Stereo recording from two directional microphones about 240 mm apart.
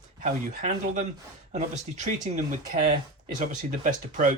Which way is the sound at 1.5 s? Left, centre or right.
Right.